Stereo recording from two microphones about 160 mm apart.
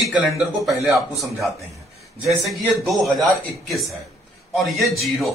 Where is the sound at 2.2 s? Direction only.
Centre (ahead or behind).